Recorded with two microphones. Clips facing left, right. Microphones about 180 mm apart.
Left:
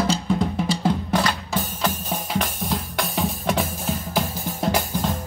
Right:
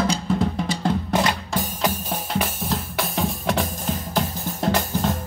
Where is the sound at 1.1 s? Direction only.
20° right (ahead or behind).